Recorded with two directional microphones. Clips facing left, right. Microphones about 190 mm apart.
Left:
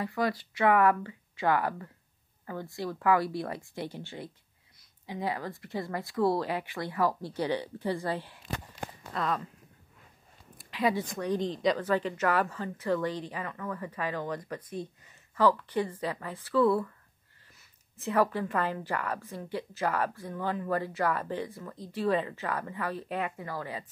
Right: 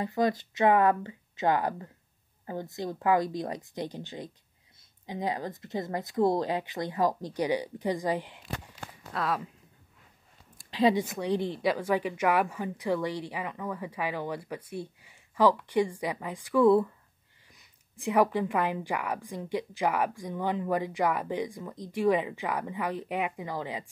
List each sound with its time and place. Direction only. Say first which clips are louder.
0.0 s speech: right 3 dB; 20° right (ahead or behind)
9.1 s speech: right 1 dB; 5° right (ahead or behind)
10.7 s a woman's voice: right 4 dB; 25° right (ahead or behind)
11.1 s a woman's voice: right 1 dB; 10° right (ahead or behind)